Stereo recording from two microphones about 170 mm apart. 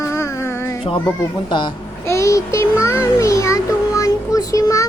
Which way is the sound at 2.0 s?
15° left (ahead or behind).